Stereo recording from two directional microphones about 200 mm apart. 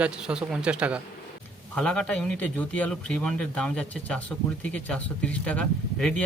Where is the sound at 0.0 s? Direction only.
5° right (ahead or behind).